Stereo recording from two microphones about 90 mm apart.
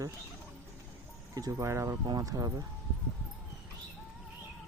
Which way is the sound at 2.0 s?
40° right (ahead or behind).